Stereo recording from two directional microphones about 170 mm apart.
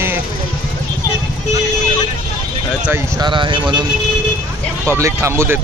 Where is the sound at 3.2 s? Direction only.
30° right (ahead or behind).